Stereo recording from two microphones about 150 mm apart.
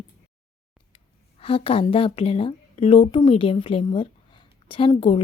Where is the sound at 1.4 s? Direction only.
40° left (ahead or behind).